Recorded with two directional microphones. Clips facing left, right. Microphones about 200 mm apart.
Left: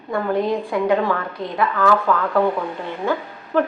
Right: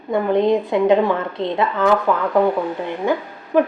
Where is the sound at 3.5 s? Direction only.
15° right (ahead or behind).